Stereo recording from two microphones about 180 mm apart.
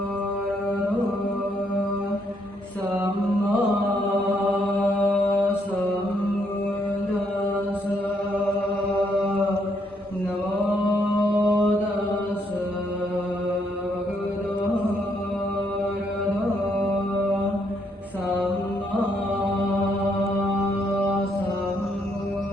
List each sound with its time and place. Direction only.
4.1 s mantra: 10° right (ahead or behind)
11.3 s chant: 10° right (ahead or behind)